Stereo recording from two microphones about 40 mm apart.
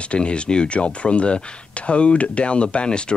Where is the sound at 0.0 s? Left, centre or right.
Left.